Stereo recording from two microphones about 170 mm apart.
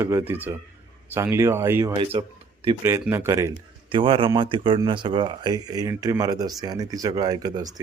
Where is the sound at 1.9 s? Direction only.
30° right (ahead or behind).